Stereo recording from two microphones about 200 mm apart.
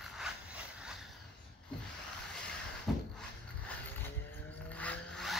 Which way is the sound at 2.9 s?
Centre (ahead or behind).